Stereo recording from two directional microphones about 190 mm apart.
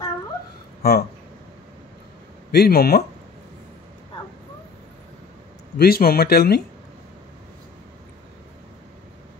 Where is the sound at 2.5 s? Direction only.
55° left (ahead or behind).